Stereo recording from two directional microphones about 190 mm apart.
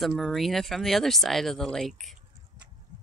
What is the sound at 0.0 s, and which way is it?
Speech, centre (ahead or behind).